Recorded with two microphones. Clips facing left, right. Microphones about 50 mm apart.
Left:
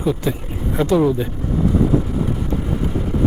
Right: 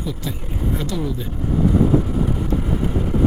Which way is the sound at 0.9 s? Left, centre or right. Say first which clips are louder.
Left 10 dB; left.